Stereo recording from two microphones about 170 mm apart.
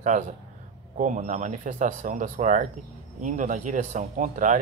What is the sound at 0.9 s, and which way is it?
Speech, 45° right (ahead or behind).